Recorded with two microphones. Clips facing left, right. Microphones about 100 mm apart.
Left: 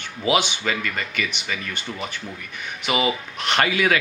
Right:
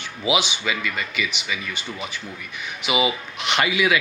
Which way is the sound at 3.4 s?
45° left (ahead or behind).